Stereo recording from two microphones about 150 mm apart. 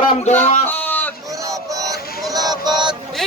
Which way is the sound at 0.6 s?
10° left (ahead or behind).